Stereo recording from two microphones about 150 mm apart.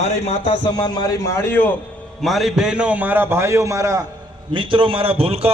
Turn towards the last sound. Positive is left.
turn(degrees=-40)  # may be behind; listen again after turning